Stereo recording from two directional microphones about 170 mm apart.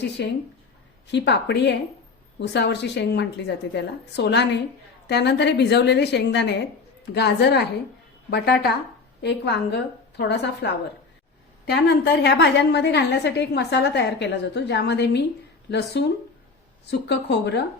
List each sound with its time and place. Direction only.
0.2 s a woman's voice: 85° left
2.4 s a woman's voice: 90° left
7.1 s a woman's voice: 75° left (ahead or behind)
9.2 s a woman's voice: 80° left